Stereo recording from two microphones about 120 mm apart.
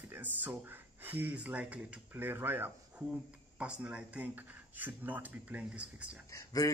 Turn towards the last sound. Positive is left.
turn(degrees=25)  # may be behind; listen again after turning